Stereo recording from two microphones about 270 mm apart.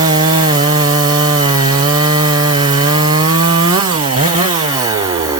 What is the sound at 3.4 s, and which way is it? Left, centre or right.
Chainsaw, centre.